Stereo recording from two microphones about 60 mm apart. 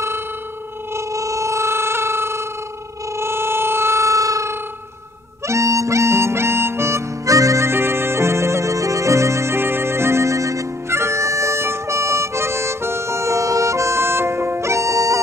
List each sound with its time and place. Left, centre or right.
0.9 s a sound: right
5.5 s harmonica: right
7.2 s harmonica: right
7.6 s music: right